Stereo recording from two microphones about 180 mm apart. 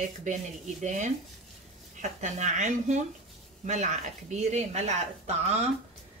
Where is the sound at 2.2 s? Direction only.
40° right (ahead or behind).